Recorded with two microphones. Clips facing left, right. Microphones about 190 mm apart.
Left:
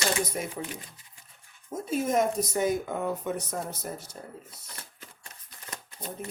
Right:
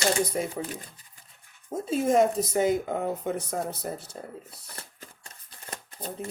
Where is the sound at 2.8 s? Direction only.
45° right (ahead or behind).